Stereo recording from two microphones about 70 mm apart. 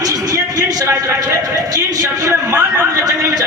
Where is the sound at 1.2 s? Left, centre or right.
Right.